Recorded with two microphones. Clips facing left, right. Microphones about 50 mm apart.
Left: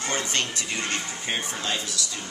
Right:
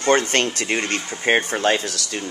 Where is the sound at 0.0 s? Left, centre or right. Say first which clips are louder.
Right 10 dB; right.